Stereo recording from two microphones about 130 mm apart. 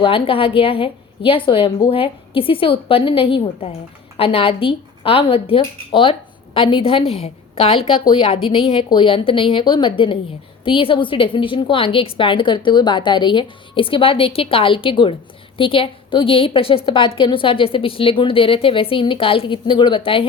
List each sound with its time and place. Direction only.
0.0 s a woman's voice: 45° left (ahead or behind)